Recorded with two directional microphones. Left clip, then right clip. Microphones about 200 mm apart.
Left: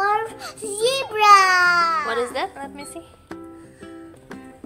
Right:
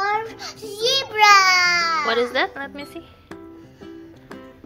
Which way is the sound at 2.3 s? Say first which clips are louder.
Right 4 dB; 20° right (ahead or behind).